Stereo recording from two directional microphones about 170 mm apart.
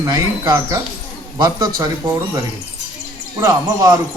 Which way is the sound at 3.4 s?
20° right (ahead or behind).